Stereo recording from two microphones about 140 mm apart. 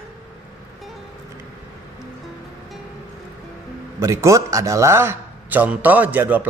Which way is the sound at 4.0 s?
20° right (ahead or behind).